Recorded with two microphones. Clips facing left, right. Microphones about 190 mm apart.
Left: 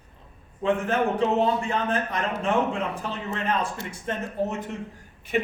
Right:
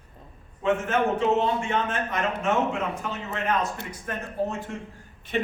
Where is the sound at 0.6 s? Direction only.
35° left (ahead or behind).